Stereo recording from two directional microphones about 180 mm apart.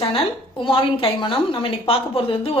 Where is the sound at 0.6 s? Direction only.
30° left (ahead or behind).